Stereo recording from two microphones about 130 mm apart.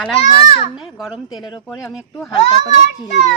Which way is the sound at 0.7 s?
5° right (ahead or behind).